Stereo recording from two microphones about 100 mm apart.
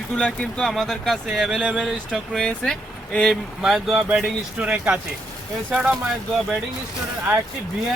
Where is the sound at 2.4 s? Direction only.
5° left (ahead or behind).